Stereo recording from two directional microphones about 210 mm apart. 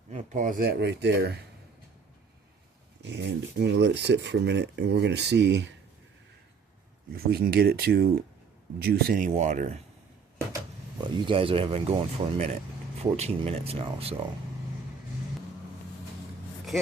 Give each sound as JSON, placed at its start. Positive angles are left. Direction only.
{"t": 0.1, "sound": "speech", "side_deg": -35}
{"t": 3.0, "sound": "speech", "side_deg": -55}
{"t": 7.3, "sound": "speech", "side_deg": -50}
{"t": 11.3, "sound": "speech", "side_deg": -25}